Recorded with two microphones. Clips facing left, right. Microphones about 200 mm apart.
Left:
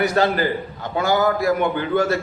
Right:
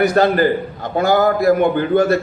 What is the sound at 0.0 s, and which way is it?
A man's voice, 50° right (ahead or behind).